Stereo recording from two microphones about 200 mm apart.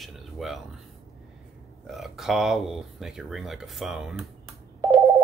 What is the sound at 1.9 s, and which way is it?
Speech, centre (ahead or behind).